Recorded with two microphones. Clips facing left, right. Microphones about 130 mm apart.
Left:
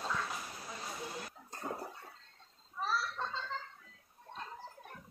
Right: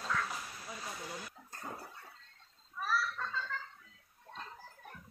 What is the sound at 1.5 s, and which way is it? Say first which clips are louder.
Bathtub: left 5 dB; 25° left (ahead or behind).